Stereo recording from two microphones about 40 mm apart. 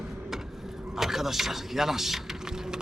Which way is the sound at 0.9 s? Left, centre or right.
Centre.